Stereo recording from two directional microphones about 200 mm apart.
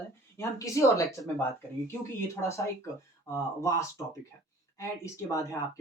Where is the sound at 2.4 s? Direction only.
15° left (ahead or behind).